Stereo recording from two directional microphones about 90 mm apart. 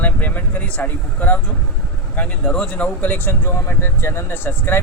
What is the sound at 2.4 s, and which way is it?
Speech, 10° left (ahead or behind).